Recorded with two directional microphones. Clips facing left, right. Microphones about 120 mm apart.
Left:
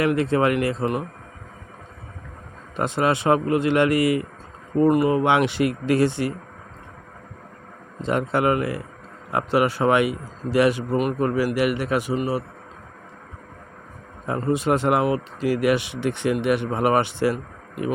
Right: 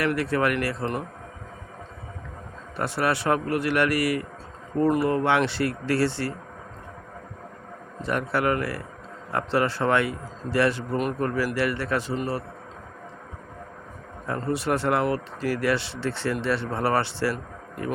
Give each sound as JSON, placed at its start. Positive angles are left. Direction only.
{"t": 0.0, "sound": "a man's voice", "side_deg": 20}
{"t": 2.7, "sound": "a man's voice", "side_deg": 20}
{"t": 8.0, "sound": "a man's voice", "side_deg": 20}
{"t": 14.3, "sound": "speech", "side_deg": 15}